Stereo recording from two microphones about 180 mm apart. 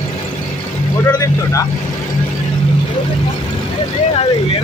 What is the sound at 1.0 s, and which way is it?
Speech, 20° left (ahead or behind).